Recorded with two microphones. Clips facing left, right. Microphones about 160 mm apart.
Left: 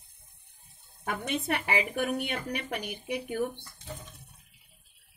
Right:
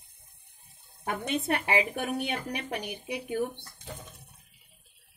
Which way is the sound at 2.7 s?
20° right (ahead or behind).